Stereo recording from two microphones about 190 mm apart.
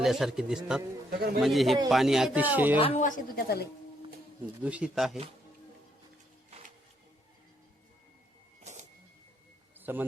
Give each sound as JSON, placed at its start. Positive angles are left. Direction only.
{"t": 0.0, "sound": "speech", "side_deg": 0}
{"t": 1.1, "sound": "a man's voice", "side_deg": -55}
{"t": 1.4, "sound": "speech", "side_deg": 0}
{"t": 2.7, "sound": "speech", "side_deg": 30}
{"t": 3.0, "sound": "speech", "side_deg": 50}
{"t": 4.6, "sound": "speech", "side_deg": -5}
{"t": 9.7, "sound": "a sound", "side_deg": -10}